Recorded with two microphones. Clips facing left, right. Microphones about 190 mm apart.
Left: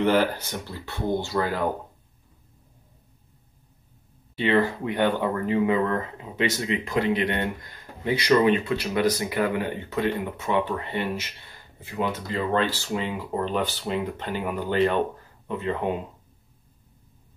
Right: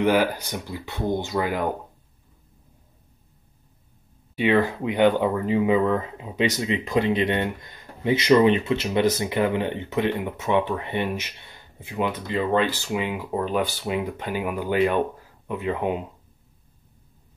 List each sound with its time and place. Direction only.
0.0 s speech: 10° right (ahead or behind)
4.4 s speech: 15° right (ahead or behind)